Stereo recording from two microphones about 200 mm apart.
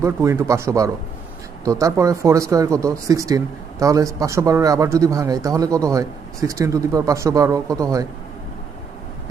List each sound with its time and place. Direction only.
0.0 s speech: 15° right (ahead or behind)